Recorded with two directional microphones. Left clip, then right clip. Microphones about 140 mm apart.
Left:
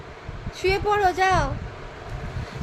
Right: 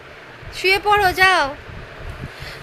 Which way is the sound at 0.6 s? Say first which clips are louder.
Right 6 dB; centre (ahead or behind).